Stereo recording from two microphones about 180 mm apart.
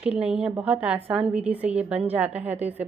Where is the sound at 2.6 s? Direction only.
35° right (ahead or behind).